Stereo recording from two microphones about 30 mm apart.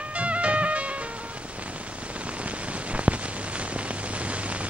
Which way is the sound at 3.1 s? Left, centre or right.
Right.